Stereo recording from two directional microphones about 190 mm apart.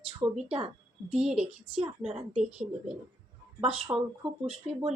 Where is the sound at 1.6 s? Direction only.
30° right (ahead or behind).